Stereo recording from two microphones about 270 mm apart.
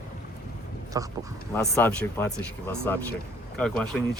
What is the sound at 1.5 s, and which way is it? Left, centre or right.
Speech, centre.